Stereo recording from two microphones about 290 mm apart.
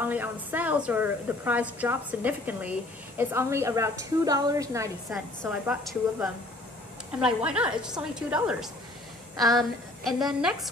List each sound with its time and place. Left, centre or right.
0.0 s a woman's voice: centre